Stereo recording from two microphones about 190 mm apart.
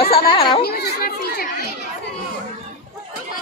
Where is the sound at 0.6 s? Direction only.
55° left (ahead or behind).